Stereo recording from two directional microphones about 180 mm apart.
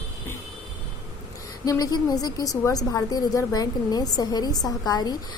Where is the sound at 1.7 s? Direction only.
20° left (ahead or behind).